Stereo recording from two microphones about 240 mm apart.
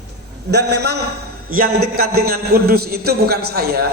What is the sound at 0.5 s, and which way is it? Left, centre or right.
A man's voice, right.